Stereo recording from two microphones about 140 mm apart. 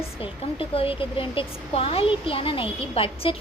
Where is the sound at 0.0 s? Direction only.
40° left (ahead or behind).